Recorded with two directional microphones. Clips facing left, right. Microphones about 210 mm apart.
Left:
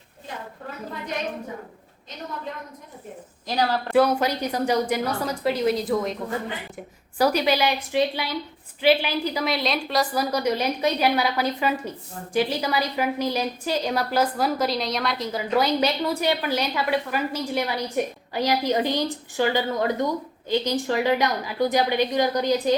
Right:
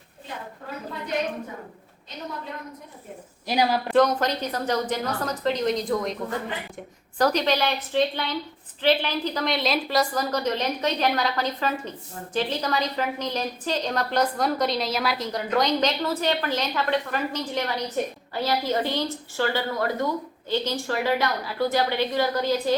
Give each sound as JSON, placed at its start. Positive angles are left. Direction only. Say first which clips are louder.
{"t": 3.4, "sound": "a woman's voice", "louder": "right 1 dB", "side_deg": -10}
{"t": 3.9, "sound": "a woman's voice", "louder": "left 2 dB", "side_deg": 10}
{"t": 7.2, "sound": "a woman's voice", "louder": "left 1 dB", "side_deg": 10}